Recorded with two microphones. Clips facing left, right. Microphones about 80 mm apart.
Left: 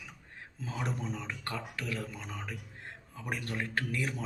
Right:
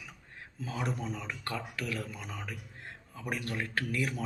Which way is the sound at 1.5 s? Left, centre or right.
Left.